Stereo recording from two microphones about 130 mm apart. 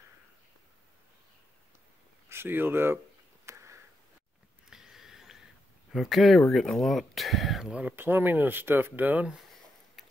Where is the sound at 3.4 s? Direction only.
20° right (ahead or behind).